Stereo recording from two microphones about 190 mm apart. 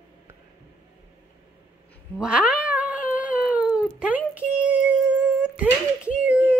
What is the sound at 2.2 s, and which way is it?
Cat, 5° right (ahead or behind).